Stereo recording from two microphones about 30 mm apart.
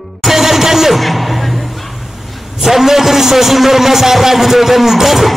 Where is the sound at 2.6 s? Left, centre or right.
Centre.